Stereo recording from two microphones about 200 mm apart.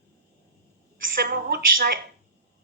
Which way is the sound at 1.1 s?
50° right (ahead or behind).